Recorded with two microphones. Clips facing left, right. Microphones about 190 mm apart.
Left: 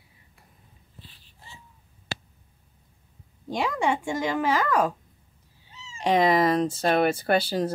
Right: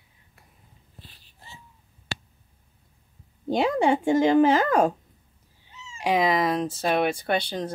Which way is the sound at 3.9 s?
30° right (ahead or behind).